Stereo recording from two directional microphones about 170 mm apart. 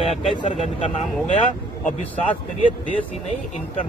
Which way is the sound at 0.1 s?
35° left (ahead or behind).